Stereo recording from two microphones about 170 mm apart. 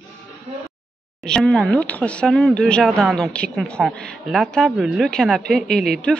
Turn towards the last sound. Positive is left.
turn(degrees=5)  # may be behind; listen again after turning